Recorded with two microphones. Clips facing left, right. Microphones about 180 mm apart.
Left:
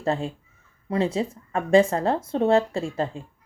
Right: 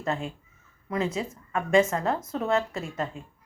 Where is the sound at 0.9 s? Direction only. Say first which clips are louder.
Left 5 dB; 30° left (ahead or behind).